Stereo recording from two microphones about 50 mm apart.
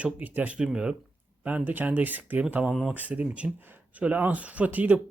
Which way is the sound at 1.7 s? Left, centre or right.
Right.